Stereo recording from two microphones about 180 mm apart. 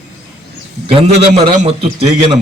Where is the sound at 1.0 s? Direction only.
35° right (ahead or behind).